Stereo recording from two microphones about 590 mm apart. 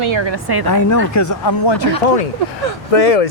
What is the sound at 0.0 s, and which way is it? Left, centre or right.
Speech, right.